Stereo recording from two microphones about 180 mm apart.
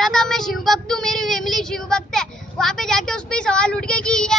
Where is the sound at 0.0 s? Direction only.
5° left (ahead or behind).